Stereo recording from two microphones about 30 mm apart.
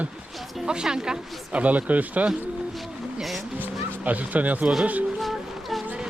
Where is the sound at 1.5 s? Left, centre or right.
Right.